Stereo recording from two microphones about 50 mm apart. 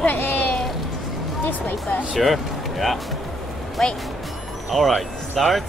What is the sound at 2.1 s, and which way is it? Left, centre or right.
Speech, centre.